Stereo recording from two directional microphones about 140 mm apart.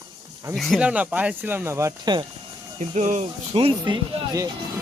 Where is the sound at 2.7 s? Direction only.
55° right (ahead or behind).